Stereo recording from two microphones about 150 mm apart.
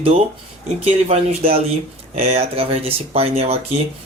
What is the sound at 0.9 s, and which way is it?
Speech, 45° right (ahead or behind).